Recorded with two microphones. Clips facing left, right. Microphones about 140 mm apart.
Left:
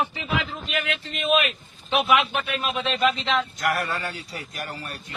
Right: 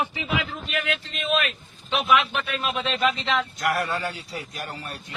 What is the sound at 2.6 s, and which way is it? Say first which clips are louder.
A man's voice: left 1 dB; centre (ahead or behind).